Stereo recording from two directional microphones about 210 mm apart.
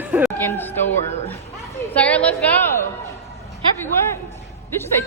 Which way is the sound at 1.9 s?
5° left (ahead or behind).